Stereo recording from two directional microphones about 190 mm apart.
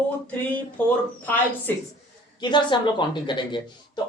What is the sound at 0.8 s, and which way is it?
A woman's voice, 5° left (ahead or behind).